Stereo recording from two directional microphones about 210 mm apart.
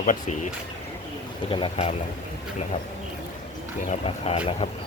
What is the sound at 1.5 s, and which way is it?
Speech, 25° left (ahead or behind).